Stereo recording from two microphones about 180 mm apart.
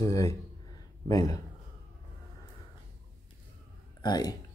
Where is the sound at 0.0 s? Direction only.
20° left (ahead or behind).